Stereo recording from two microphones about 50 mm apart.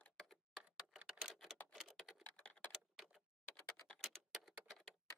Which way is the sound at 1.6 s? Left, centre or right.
Left.